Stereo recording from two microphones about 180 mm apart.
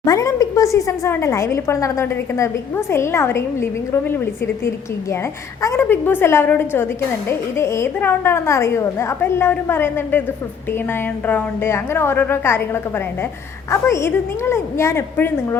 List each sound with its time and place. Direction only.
0.0 s speech: 20° left (ahead or behind)
5.6 s speech: 10° left (ahead or behind)
11.3 s speech: 10° left (ahead or behind)
13.7 s speech: 15° left (ahead or behind)